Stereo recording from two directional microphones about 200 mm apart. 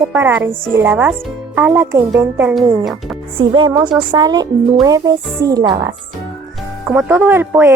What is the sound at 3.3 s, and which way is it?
A woman's voice, 25° right (ahead or behind).